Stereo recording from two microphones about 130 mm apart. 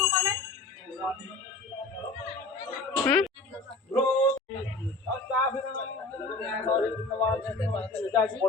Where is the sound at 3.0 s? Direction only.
5° left (ahead or behind).